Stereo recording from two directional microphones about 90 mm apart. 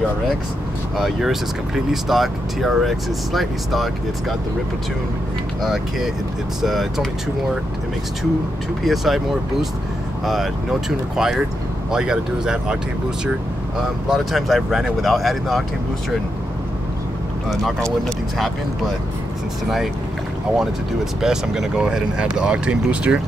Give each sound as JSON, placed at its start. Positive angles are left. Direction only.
{"t": 0.9, "sound": "speech", "side_deg": 0}
{"t": 5.6, "sound": "speech", "side_deg": -5}
{"t": 8.8, "sound": "speech", "side_deg": 0}
{"t": 14.0, "sound": "speech", "side_deg": 0}
{"t": 20.5, "sound": "speech", "side_deg": -5}